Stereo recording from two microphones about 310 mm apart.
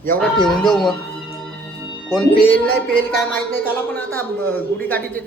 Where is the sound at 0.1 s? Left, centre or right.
Centre.